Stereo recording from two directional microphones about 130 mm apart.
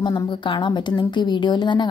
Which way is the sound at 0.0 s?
35° left (ahead or behind).